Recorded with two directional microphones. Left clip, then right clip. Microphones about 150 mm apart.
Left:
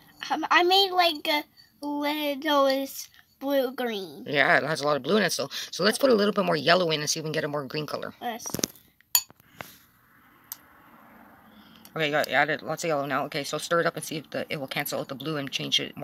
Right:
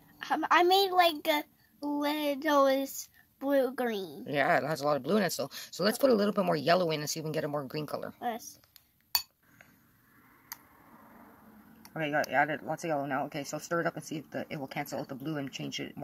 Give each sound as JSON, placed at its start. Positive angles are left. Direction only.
{"t": 0.2, "sound": "a child's voice", "side_deg": -15}
{"t": 4.2, "sound": "speech", "side_deg": -5}
{"t": 11.9, "sound": "speech", "side_deg": 10}
{"t": 13.4, "sound": "speech", "side_deg": 0}